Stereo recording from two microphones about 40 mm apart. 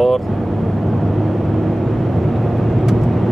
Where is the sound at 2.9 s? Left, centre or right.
Centre.